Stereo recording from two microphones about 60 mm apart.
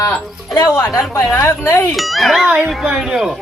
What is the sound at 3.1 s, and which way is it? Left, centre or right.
Speech, centre.